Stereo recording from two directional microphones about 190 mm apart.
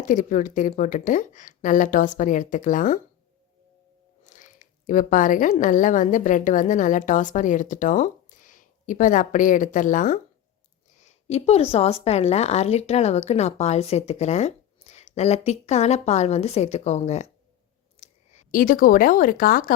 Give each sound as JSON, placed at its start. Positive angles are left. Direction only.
{"t": 0.0, "sound": "speech", "side_deg": 45}
{"t": 4.2, "sound": "a woman's voice", "side_deg": 40}